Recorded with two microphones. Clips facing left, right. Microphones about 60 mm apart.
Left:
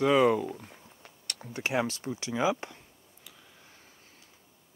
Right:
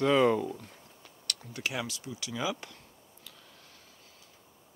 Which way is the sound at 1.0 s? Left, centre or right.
Left.